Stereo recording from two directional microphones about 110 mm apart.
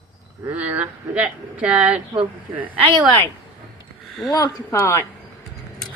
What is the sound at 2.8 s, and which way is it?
Speech, 45° right (ahead or behind).